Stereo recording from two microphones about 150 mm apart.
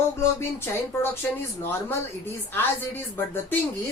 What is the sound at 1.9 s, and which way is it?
A woman's voice, 15° left (ahead or behind).